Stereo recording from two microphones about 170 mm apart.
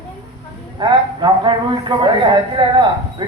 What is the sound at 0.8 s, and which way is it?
Speech, 25° right (ahead or behind).